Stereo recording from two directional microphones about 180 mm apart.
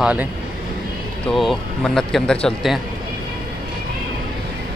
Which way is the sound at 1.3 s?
Centre (ahead or behind).